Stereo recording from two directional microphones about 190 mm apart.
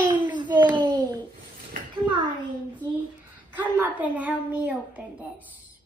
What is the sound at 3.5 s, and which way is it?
A child's voice, 10° right (ahead or behind).